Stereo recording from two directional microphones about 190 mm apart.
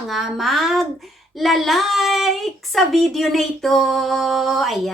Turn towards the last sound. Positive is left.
turn(degrees=0)  # may be behind; listen again after turning